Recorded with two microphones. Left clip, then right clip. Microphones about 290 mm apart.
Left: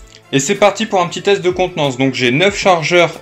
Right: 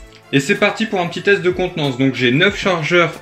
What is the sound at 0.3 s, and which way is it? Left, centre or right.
Speech, left.